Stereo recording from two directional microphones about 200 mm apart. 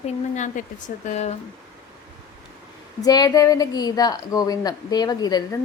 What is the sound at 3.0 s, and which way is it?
A woman's voice, 20° left (ahead or behind).